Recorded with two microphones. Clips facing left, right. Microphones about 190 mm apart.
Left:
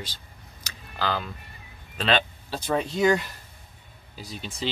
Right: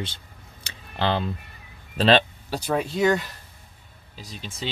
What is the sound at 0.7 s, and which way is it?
Camera, 25° right (ahead or behind).